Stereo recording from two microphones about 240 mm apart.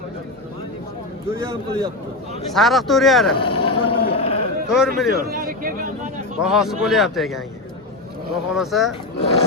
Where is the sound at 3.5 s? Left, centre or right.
Left.